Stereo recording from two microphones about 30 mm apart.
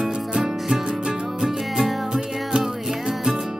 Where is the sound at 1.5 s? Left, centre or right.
Centre.